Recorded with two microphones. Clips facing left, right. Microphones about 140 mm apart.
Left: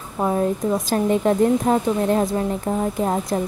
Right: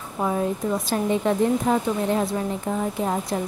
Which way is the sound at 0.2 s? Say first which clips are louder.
Left 3 dB; 40° left (ahead or behind).